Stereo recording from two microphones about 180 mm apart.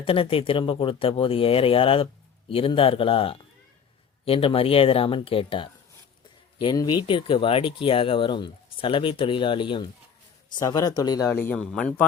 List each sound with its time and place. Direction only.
0.0 s speech: 30° left (ahead or behind); by 12.0 s 5° left (ahead or behind)